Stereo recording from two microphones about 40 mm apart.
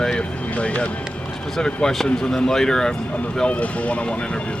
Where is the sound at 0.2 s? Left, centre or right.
Left.